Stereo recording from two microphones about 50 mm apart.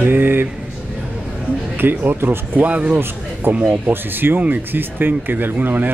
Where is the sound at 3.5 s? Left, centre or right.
Right.